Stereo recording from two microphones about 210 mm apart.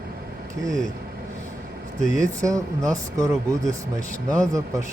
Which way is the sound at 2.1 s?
15° right (ahead or behind).